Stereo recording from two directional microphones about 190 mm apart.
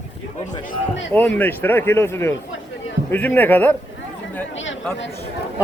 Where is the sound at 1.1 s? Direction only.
10° left (ahead or behind).